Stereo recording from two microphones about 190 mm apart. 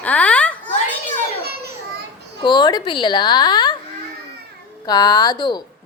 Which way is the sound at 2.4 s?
25° left (ahead or behind).